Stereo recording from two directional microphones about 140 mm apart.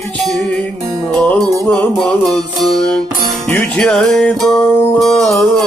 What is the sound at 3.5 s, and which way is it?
Music, 10° left (ahead or behind).